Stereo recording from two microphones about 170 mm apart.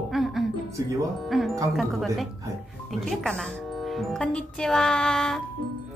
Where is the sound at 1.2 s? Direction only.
Centre (ahead or behind).